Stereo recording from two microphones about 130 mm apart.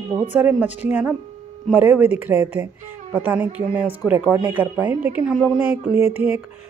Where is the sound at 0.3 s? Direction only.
15° right (ahead or behind).